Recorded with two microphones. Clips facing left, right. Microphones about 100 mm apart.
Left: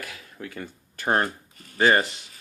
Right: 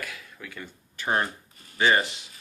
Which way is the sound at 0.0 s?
40° left (ahead or behind).